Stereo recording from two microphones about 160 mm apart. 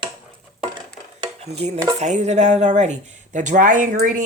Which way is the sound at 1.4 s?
45° right (ahead or behind).